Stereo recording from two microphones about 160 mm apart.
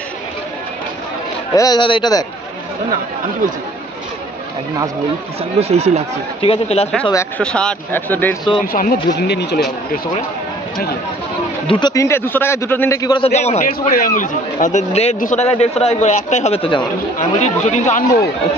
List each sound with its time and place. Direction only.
1.5 s a man's voice: 25° left (ahead or behind)
5.4 s speech: 40° right (ahead or behind)
6.4 s speech: 35° left (ahead or behind)
7.3 s a man's voice: 5° left (ahead or behind)
8.7 s speech: 75° left (ahead or behind)
11.6 s a man's voice: 30° left (ahead or behind)
13.2 s a man's voice: 45° left (ahead or behind)
13.7 s a man's voice: 60° left (ahead or behind); by 18.0 s 45° left (ahead or behind)